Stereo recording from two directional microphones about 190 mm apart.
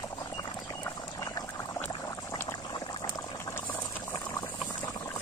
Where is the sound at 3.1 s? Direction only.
15° left (ahead or behind).